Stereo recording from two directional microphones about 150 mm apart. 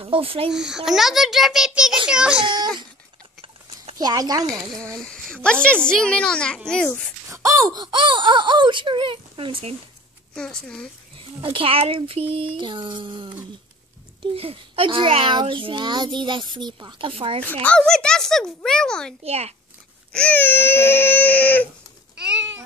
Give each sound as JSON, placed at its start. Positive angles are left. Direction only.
{"t": 0.0, "sound": "speech", "side_deg": -35}
{"t": 0.5, "sound": "a child's voice", "side_deg": -5}
{"t": 4.0, "sound": "speech", "side_deg": -25}
{"t": 4.9, "sound": "a woman's voice", "side_deg": 5}
{"t": 6.7, "sound": "baby cry", "side_deg": 5}
{"t": 7.2, "sound": "speech", "side_deg": -20}
{"t": 10.3, "sound": "a child's voice", "side_deg": 5}
{"t": 11.1, "sound": "speech", "side_deg": -35}
{"t": 17.4, "sound": "a child's voice", "side_deg": 10}
{"t": 19.2, "sound": "a child's voice", "side_deg": -45}
{"t": 20.1, "sound": "baby cry", "side_deg": 10}
{"t": 22.2, "sound": "cat", "side_deg": -5}